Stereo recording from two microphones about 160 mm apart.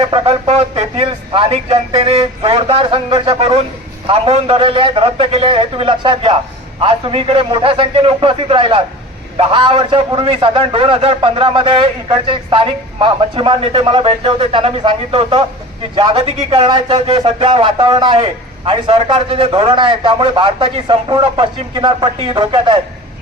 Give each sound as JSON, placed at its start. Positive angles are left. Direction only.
{"t": 0.0, "sound": "speech", "side_deg": -40}